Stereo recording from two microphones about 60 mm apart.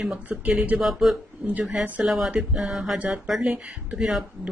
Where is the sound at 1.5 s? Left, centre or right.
Right.